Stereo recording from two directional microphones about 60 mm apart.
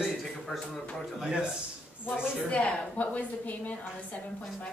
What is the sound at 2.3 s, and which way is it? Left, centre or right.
A woman's voice, left.